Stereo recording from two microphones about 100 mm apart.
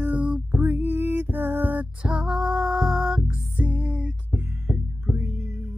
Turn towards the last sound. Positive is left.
turn(degrees=-25)  # may be behind; listen again after turning